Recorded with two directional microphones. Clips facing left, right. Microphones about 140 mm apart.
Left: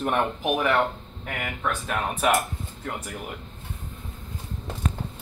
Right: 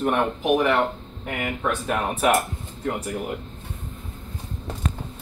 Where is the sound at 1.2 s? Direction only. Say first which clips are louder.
Right 4 dB; 20° right (ahead or behind).